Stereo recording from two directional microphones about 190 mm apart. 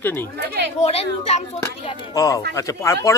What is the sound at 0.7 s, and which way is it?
Speech, 35° left (ahead or behind).